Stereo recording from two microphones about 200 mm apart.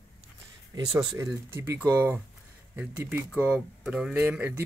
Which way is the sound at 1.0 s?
15° right (ahead or behind).